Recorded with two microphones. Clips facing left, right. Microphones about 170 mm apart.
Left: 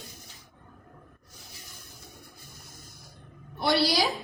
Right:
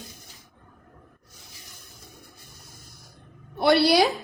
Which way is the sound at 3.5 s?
60° right (ahead or behind).